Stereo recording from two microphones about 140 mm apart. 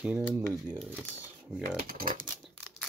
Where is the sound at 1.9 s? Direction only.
90° right.